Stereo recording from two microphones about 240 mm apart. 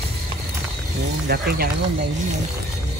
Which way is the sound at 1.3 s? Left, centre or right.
Right.